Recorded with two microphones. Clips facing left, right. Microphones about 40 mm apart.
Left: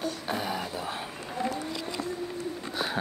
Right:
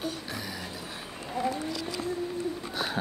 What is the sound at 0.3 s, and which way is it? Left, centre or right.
Music, left.